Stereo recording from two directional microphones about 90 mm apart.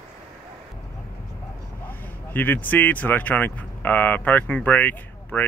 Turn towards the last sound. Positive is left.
turn(degrees=20)  # may be behind; listen again after turning